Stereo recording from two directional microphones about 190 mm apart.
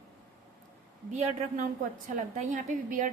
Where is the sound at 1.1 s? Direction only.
40° right (ahead or behind).